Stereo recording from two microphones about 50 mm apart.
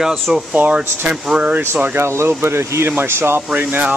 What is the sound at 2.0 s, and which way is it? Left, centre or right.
Speech, right.